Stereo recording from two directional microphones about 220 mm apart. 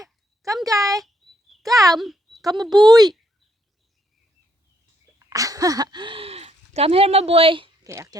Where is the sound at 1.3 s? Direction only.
Centre (ahead or behind).